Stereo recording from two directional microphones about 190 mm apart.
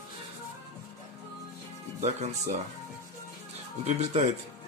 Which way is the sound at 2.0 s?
35° right (ahead or behind).